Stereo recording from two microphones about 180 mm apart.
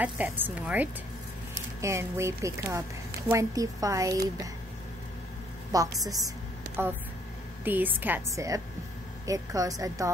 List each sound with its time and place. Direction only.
0.0 s speech: 10° right (ahead or behind)
5.7 s speech: 20° right (ahead or behind)
7.6 s speech: 10° right (ahead or behind)